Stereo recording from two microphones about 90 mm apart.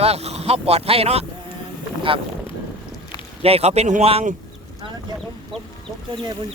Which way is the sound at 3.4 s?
90° right.